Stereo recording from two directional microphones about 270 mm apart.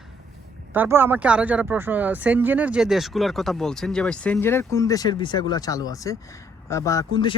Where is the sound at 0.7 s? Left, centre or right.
Centre.